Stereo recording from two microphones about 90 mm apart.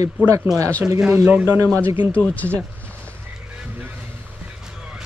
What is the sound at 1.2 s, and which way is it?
Speech, 10° right (ahead or behind).